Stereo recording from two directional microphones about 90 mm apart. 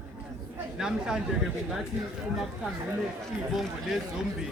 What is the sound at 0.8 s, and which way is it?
A man's voice, 5° right (ahead or behind).